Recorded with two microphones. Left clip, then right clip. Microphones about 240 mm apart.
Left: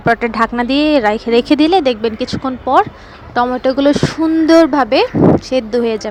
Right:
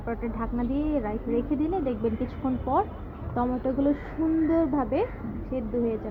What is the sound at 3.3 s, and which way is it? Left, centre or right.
Speech, left.